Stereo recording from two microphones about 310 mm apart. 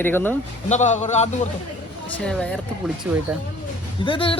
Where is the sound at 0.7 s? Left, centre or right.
Left.